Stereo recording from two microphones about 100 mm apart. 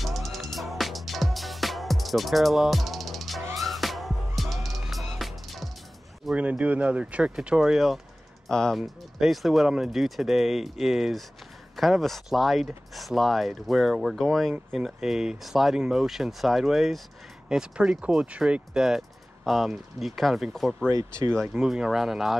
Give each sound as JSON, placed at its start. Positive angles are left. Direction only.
{"t": 0.0, "sound": "music", "side_deg": 0}
{"t": 6.3, "sound": "speech", "side_deg": -15}
{"t": 20.9, "sound": "speech", "side_deg": -35}
{"t": 21.4, "sound": "speech", "side_deg": -5}